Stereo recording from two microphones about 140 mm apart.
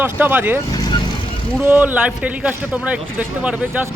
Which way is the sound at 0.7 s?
30° left (ahead or behind).